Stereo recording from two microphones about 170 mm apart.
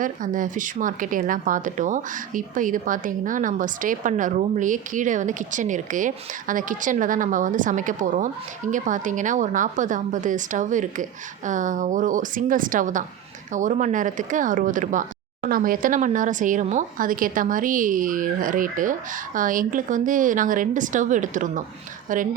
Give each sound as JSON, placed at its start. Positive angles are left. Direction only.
{"t": 0.0, "sound": "a woman's voice", "side_deg": -50}